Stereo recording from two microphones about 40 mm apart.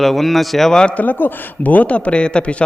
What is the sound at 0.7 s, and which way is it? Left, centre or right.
Speech, centre.